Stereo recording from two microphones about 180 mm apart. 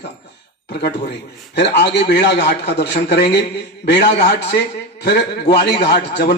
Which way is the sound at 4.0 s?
35° left (ahead or behind).